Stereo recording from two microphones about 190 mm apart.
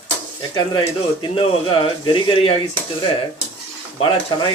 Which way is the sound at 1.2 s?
30° left (ahead or behind).